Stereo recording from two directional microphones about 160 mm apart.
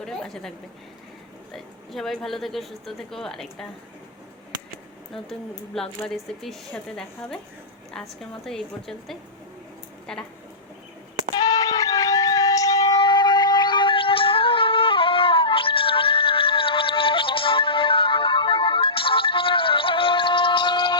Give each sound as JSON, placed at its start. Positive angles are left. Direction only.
{"t": 0.0, "sound": "a woman's voice", "side_deg": 5}
{"t": 1.5, "sound": "a woman's voice", "side_deg": 0}
{"t": 5.7, "sound": "a woman's voice", "side_deg": 5}
{"t": 11.3, "sound": "music", "side_deg": 25}